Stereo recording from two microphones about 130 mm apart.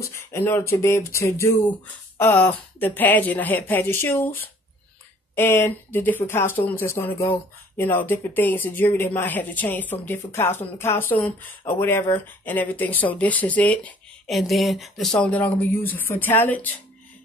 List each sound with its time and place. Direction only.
0.0 s speech: 20° left (ahead or behind)
14.3 s speech: centre (ahead or behind)
15.1 s speech: 10° left (ahead or behind)